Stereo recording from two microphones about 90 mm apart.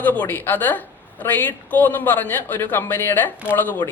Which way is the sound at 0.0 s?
20° left (ahead or behind).